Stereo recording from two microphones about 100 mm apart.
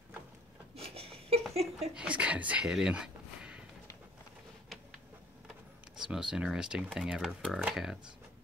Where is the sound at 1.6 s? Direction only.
90° right.